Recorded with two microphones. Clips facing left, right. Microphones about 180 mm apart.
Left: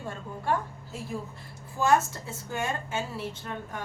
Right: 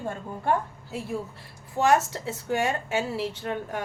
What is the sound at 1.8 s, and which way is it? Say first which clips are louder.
A woman's voice: right 2 dB; 75° right (ahead or behind).